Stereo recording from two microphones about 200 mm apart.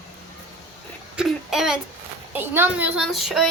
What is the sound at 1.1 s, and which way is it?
Speech, 5° right (ahead or behind).